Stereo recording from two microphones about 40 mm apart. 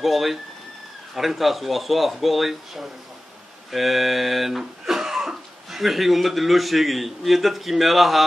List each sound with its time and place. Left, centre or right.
0.0 s speech: centre